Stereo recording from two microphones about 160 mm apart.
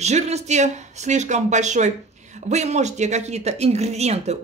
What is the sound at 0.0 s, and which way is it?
Speech, 45° right (ahead or behind).